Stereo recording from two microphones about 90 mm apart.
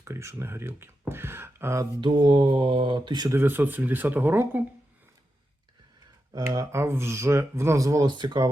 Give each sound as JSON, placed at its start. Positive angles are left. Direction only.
{"t": 0.0, "sound": "speech", "side_deg": -30}
{"t": 2.0, "sound": "speech", "side_deg": -65}
{"t": 3.2, "sound": "speech", "side_deg": -25}
{"t": 6.3, "sound": "speech", "side_deg": -40}
{"t": 8.1, "sound": "speech", "side_deg": -60}